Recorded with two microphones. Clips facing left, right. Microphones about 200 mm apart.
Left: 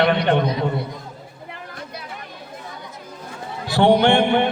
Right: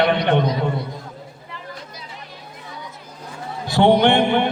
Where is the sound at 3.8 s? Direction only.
20° right (ahead or behind).